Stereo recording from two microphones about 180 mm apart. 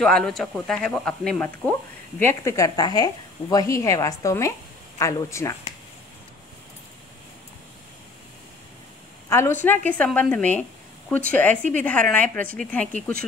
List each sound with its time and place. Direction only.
0.0 s speech: 5° left (ahead or behind)
9.3 s speech: 10° left (ahead or behind)